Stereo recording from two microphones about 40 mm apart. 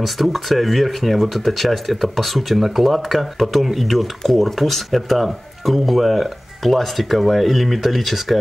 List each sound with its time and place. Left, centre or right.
0.0 s speech: centre